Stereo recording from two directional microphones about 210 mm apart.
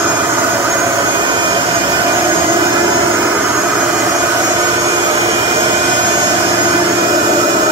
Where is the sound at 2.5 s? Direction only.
20° right (ahead or behind).